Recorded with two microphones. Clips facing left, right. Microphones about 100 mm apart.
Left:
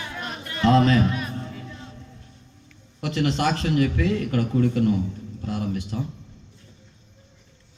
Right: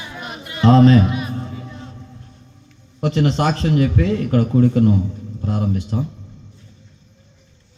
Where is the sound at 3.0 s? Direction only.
30° right (ahead or behind).